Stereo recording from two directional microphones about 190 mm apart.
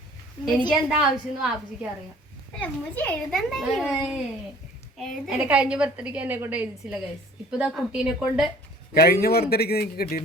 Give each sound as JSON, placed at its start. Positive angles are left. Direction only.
{"t": 0.7, "sound": "a child's voice", "side_deg": -5}
{"t": 2.6, "sound": "a child's voice", "side_deg": 10}
{"t": 9.0, "sound": "a man's voice", "side_deg": 55}